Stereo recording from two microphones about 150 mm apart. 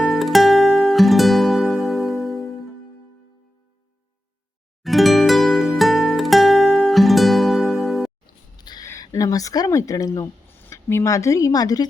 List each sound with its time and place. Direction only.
0.0 s music: centre (ahead or behind)
4.8 s music: centre (ahead or behind)
8.5 s a sound: 30° left (ahead or behind)
8.9 s speech: 25° left (ahead or behind)